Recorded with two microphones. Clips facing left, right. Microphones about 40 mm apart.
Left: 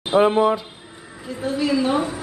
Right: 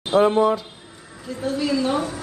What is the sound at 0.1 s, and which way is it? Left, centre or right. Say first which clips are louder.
A woman's voice: left 1 dB; centre.